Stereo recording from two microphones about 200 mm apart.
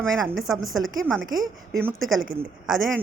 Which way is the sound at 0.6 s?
80° right.